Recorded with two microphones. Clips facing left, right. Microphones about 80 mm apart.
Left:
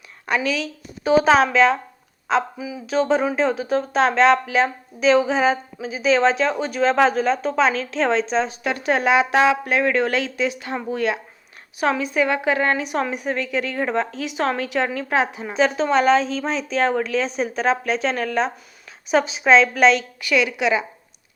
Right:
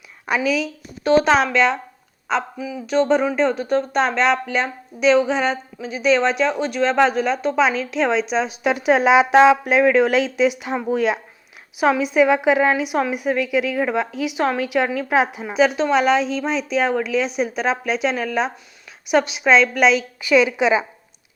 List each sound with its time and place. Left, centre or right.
0.3 s a woman's voice: centre
1.0 s a woman's voice: centre; by 20.8 s right